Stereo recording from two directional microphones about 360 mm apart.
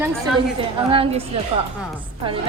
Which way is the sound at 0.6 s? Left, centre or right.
Centre.